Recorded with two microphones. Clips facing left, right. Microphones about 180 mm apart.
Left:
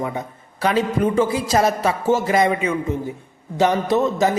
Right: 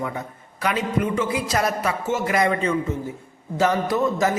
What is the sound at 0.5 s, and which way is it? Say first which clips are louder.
A man's voice: left 4 dB; 30° left (ahead or behind).